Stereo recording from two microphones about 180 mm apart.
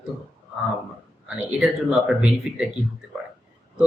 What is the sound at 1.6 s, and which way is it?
Speech, centre (ahead or behind).